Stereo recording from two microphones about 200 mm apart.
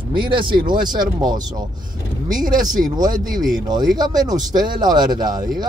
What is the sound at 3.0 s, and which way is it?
Speech, 40° right (ahead or behind).